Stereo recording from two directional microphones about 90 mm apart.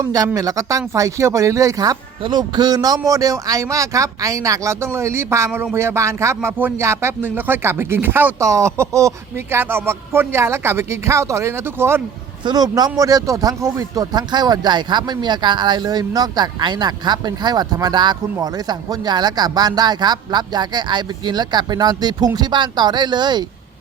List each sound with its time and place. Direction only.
0.0 s speech: 40° right (ahead or behind)
2.2 s speech: 50° right (ahead or behind); by 6.5 s 30° right (ahead or behind)
6.6 s speech: 20° right (ahead or behind)
12.5 s speech: 45° right (ahead or behind)